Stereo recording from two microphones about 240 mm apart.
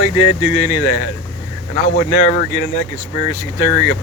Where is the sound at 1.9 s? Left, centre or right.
Left.